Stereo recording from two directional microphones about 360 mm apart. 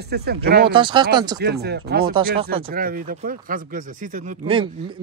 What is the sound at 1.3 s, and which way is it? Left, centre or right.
A man's voice, right.